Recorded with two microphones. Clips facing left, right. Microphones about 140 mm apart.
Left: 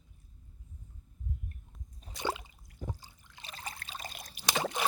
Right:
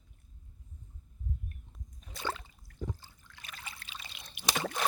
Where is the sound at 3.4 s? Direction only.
35° left (ahead or behind).